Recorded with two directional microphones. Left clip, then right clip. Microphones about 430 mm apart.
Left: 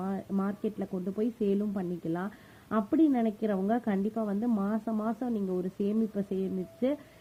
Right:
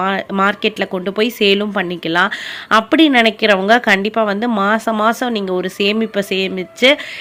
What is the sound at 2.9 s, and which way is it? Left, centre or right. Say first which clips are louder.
Speech: right 13 dB; centre.